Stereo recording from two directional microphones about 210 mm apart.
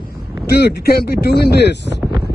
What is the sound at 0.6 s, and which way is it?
Speech, 50° left (ahead or behind).